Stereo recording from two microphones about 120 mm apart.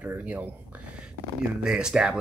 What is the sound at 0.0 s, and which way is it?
Speech, 10° right (ahead or behind).